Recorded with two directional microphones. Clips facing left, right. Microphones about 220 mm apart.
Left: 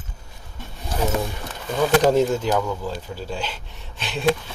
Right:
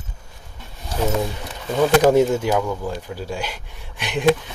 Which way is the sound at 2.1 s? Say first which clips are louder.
Right 3 dB; 10° right (ahead or behind).